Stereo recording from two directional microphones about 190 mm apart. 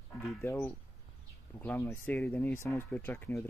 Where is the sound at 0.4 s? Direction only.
15° left (ahead or behind).